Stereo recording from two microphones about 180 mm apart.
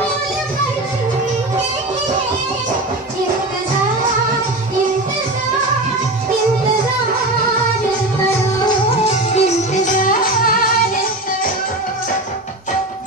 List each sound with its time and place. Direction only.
8.6 s music: 35° left (ahead or behind)